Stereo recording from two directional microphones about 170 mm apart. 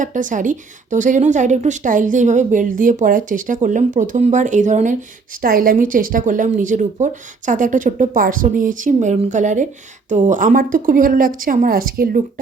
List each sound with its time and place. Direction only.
0.0 s a woman's voice: 50° right (ahead or behind)
5.4 s a woman's voice: 55° right (ahead or behind)